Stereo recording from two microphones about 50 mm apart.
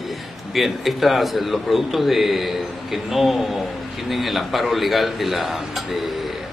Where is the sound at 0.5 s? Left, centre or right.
Centre.